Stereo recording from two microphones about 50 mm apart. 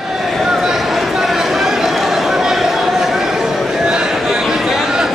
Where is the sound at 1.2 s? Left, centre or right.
Centre.